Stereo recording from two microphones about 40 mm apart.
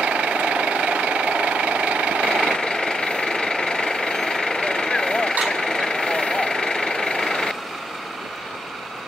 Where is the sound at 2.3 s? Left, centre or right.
Centre.